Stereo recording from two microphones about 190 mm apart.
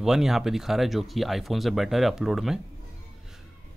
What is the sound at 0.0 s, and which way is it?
Speech, centre (ahead or behind).